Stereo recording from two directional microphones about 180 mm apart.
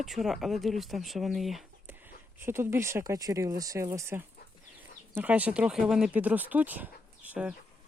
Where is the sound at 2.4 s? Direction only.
15° right (ahead or behind).